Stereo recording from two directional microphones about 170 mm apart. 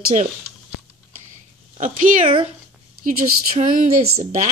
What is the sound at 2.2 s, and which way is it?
Speech, 35° right (ahead or behind).